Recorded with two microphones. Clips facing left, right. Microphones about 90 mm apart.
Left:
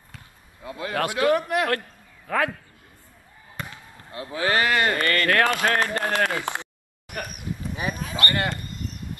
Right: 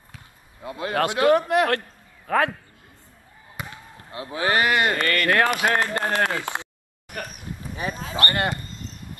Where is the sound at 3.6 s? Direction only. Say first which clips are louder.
Even; 10° right (ahead or behind).